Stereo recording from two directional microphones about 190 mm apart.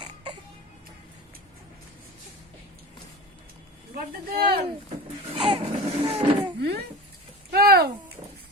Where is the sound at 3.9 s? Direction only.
55° right (ahead or behind).